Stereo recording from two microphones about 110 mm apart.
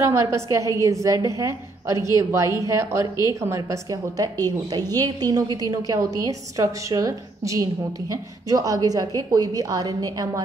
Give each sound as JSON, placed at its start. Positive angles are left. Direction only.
{"t": 0.0, "sound": "a woman's voice", "side_deg": -25}